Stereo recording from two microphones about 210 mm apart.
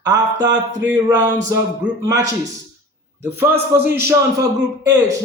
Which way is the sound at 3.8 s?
10° right (ahead or behind).